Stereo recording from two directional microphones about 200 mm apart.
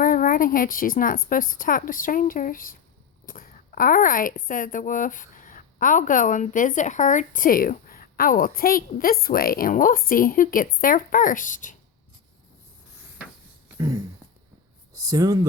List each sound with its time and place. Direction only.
0.0 s speech: 45° left (ahead or behind)
14.9 s speech: 20° right (ahead or behind)